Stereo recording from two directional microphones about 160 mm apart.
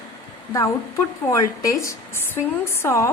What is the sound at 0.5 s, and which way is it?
Speech, 20° left (ahead or behind).